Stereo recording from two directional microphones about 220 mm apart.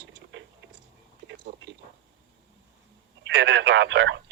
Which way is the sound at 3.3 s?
50° right (ahead or behind).